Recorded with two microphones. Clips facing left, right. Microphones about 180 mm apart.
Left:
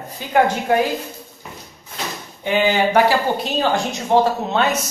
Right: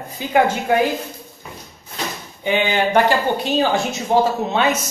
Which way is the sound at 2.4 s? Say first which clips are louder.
Left 1 dB; 5° left (ahead or behind).